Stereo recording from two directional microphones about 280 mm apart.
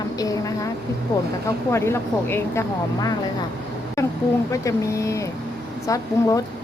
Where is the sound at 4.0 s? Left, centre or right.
Centre.